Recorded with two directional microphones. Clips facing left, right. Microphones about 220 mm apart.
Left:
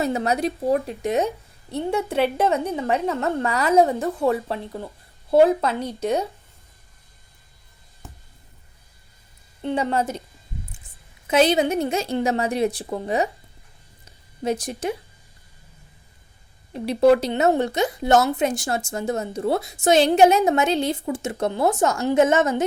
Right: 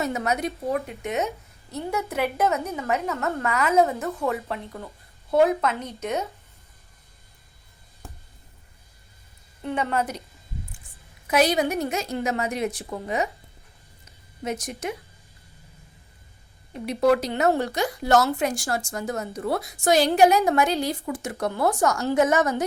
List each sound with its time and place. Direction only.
0.0 s a woman's voice: 30° left (ahead or behind)
9.6 s a woman's voice: 30° left (ahead or behind)
11.3 s a woman's voice: 25° left (ahead or behind)
14.4 s speech: 30° left (ahead or behind)
16.7 s a woman's voice: 30° left (ahead or behind)